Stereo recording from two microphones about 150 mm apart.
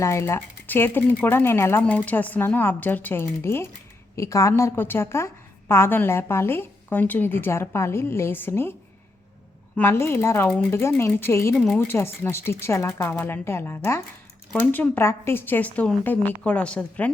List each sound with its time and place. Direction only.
0.0 s a woman's voice: 20° left (ahead or behind)
9.7 s a woman's voice: 15° left (ahead or behind)
11.5 s a woman's voice: centre (ahead or behind)
11.9 s a woman's voice: 15° left (ahead or behind)